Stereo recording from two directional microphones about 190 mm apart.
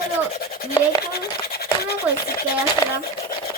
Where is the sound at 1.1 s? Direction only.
55° left (ahead or behind).